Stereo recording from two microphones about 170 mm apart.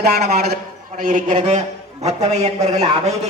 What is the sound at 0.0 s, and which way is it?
A man's voice, 65° right (ahead or behind).